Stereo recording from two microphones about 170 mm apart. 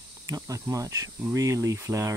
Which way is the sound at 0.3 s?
20° right (ahead or behind).